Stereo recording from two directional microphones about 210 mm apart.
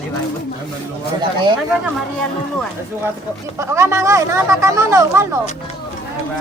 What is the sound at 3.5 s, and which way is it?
Speech, 15° right (ahead or behind).